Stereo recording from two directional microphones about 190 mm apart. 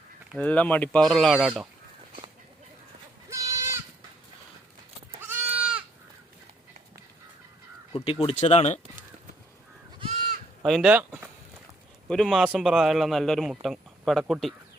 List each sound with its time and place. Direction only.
0.3 s a man's voice: 5° left (ahead or behind)
3.2 s goat: 15° right (ahead or behind)
5.2 s goat: 10° right (ahead or behind)
8.2 s speech: 30° left (ahead or behind)
10.6 s a man's voice: centre (ahead or behind)
12.0 s a man's voice: 5° left (ahead or behind)